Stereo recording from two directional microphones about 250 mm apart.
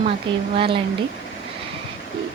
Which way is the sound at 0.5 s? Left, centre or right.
Right.